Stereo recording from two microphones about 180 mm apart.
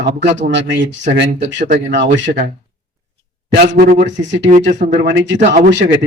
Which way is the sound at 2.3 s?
60° right (ahead or behind).